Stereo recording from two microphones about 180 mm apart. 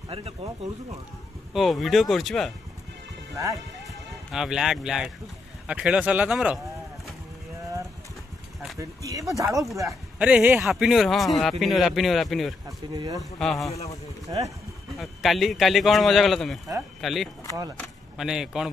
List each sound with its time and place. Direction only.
0.1 s speech: 30° right (ahead or behind)
1.5 s speech: centre (ahead or behind)
3.3 s speech: 20° right (ahead or behind)
4.3 s speech: 5° right (ahead or behind)
8.7 s speech: 20° right (ahead or behind)
10.1 s speech: 5° right (ahead or behind)
12.6 s speech: 20° right (ahead or behind)
13.2 s speech: centre (ahead or behind)
14.3 s speech: 25° right (ahead or behind)
15.0 s speech: centre (ahead or behind)